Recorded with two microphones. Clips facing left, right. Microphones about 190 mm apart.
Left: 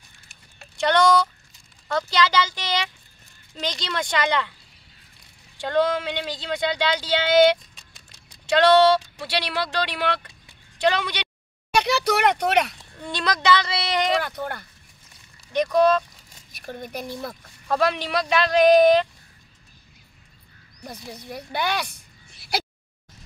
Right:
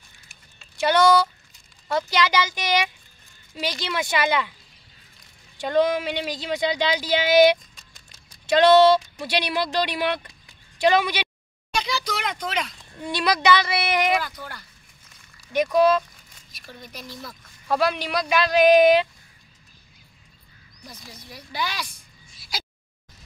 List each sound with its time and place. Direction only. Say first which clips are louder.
0.7 s speech: right 1 dB; 5° right (ahead or behind)
5.6 s speech: right 1 dB; 10° right (ahead or behind)
11.7 s speech: left 6 dB; 65° left (ahead or behind)
13.0 s speech: right 2 dB; 10° right (ahead or behind)
14.2 s speech: left 6 dB; 60° left (ahead or behind)
15.5 s speech: even; 5° right (ahead or behind)
16.5 s speech: left 8 dB; 55° left (ahead or behind)
17.6 s speech: even; 5° right (ahead or behind)
20.8 s speech: left 7 dB; 60° left (ahead or behind)